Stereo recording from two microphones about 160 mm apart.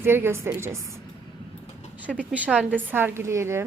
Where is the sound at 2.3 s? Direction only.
10° right (ahead or behind).